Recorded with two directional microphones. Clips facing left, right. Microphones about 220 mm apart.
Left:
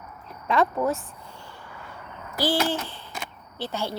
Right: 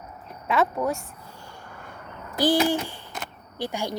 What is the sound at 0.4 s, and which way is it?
Speech, centre (ahead or behind).